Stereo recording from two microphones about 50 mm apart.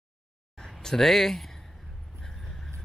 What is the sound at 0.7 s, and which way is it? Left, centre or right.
Speech, centre.